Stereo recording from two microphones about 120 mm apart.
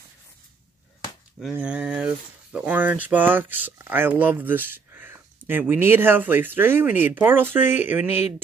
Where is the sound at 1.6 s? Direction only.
10° right (ahead or behind).